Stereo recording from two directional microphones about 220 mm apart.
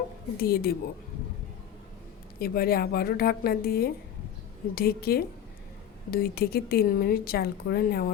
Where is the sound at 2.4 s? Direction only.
45° left (ahead or behind).